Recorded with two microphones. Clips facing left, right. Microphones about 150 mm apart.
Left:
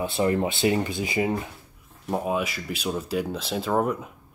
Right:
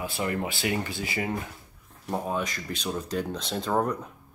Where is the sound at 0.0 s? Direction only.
25° left (ahead or behind); by 4.1 s 5° left (ahead or behind).